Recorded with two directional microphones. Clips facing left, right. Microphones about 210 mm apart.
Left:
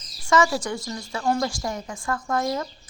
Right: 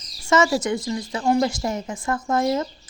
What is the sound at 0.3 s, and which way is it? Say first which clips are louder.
A woman's voice: right 2 dB; 20° right (ahead or behind).